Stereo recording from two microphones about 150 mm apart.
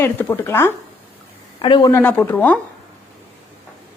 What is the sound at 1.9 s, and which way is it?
Speech, 10° left (ahead or behind).